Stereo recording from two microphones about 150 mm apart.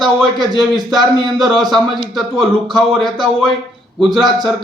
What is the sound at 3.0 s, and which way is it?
Speech, 30° right (ahead or behind).